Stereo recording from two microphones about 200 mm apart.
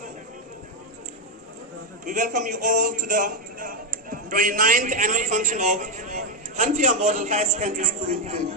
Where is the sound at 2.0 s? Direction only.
40° right (ahead or behind).